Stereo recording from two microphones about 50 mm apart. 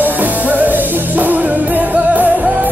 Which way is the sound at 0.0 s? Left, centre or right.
Right.